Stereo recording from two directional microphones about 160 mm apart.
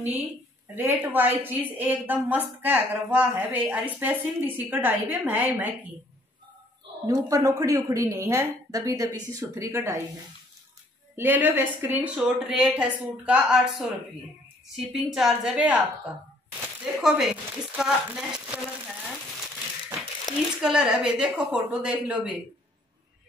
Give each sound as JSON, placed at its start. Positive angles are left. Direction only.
{"t": 0.7, "sound": "a woman's voice", "side_deg": -15}
{"t": 7.1, "sound": "a woman's voice", "side_deg": -20}
{"t": 11.1, "sound": "a woman's voice", "side_deg": -10}
{"t": 16.8, "sound": "a woman's voice", "side_deg": -5}
{"t": 20.3, "sound": "speech", "side_deg": 25}
{"t": 20.6, "sound": "a woman's voice", "side_deg": -5}